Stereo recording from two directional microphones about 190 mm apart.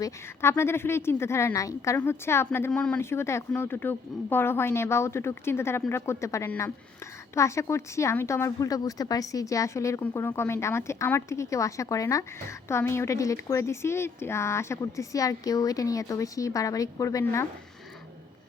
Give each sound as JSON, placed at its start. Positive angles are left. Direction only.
{"t": 0.0, "sound": "speech", "side_deg": 15}